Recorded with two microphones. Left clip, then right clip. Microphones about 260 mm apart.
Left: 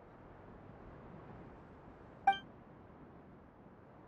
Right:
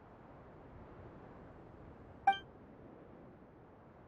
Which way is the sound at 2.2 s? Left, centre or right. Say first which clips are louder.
Even; centre.